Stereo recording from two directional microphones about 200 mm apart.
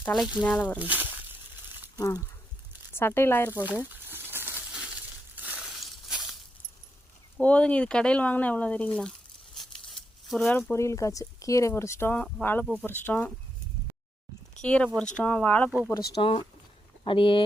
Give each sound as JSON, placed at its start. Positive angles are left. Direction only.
{"t": 0.0, "sound": "speech", "side_deg": 0}
{"t": 0.8, "sound": "a sound", "side_deg": -10}
{"t": 2.0, "sound": "speech", "side_deg": 15}
{"t": 3.5, "sound": "speech", "side_deg": -10}
{"t": 3.8, "sound": "crumpling", "side_deg": -10}
{"t": 7.3, "sound": "speech", "side_deg": 5}
{"t": 14.6, "sound": "speech", "side_deg": 5}
{"t": 16.2, "sound": "speech", "side_deg": 25}